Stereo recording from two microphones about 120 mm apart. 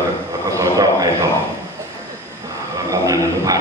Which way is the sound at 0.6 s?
30° right (ahead or behind).